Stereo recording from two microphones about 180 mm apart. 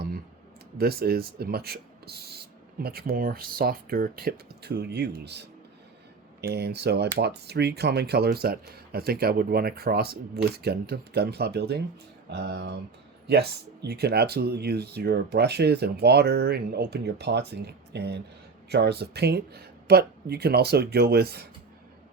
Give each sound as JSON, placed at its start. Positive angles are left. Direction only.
{"t": 0.8, "sound": "speech", "side_deg": -60}